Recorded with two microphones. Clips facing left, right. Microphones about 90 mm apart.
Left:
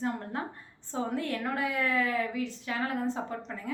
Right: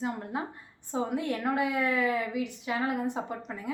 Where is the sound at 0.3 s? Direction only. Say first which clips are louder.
Right 1 dB; 10° right (ahead or behind).